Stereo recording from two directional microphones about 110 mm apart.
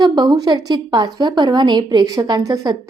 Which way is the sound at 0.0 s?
40° right (ahead or behind).